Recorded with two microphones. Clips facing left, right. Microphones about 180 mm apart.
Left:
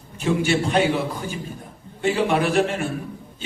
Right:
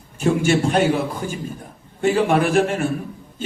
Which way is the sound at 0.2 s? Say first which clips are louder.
Right 3 dB; 50° right (ahead or behind).